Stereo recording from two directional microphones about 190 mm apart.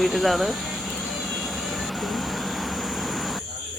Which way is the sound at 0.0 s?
Centre (ahead or behind).